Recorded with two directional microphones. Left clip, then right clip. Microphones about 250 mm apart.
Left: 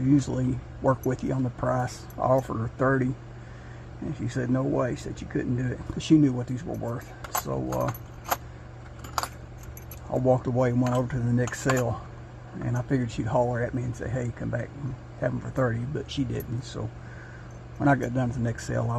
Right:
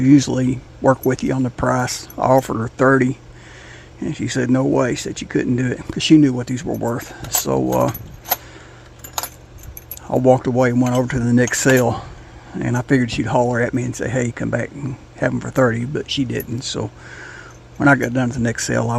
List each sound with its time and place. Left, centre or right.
0.1 s speech: right
1.5 s speech: right
1.8 s speech: right
4.1 s speech: right
10.1 s speech: right
13.5 s speech: right
15.2 s speech: right
16.0 s speech: right
17.7 s speech: right